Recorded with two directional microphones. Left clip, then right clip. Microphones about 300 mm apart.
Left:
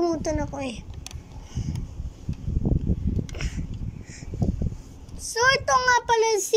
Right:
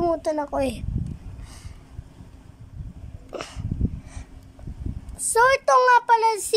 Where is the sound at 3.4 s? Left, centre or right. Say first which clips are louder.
Right 1 dB; centre.